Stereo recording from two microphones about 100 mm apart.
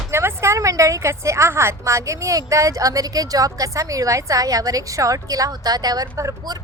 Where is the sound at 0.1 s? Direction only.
25° right (ahead or behind).